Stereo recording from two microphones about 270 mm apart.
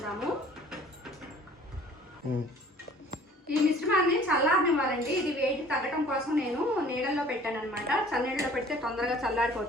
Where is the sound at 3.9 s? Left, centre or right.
Left.